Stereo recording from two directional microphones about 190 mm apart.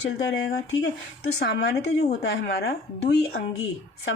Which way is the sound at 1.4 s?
60° left (ahead or behind).